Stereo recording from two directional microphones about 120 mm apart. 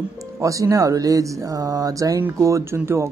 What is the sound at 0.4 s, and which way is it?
Speech, 25° right (ahead or behind).